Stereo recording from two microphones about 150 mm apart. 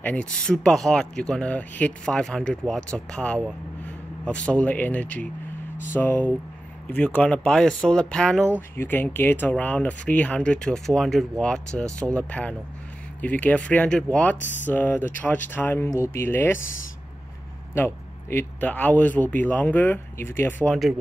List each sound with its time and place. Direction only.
0.0 s speech: 10° left (ahead or behind)
17.7 s speech: 15° left (ahead or behind)